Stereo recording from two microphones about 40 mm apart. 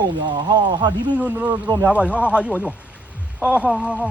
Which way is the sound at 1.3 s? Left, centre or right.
Right.